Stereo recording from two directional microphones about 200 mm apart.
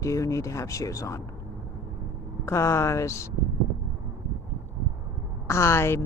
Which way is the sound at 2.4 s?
15° left (ahead or behind).